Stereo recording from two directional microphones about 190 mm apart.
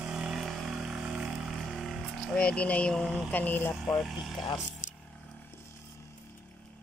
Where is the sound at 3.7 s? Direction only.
Centre (ahead or behind).